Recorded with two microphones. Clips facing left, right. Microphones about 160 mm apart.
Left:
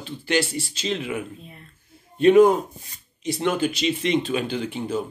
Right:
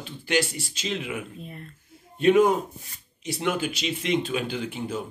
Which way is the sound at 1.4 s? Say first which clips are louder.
Right 5 dB; 45° right (ahead or behind).